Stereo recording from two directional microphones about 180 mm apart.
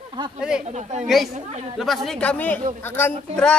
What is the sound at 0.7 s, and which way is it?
Speech, 40° right (ahead or behind).